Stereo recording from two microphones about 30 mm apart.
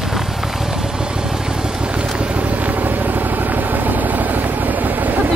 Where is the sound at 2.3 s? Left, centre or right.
Right.